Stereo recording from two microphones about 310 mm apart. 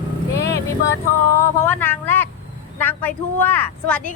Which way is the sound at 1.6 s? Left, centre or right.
Centre.